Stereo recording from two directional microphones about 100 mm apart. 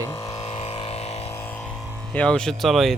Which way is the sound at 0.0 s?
30° left (ahead or behind).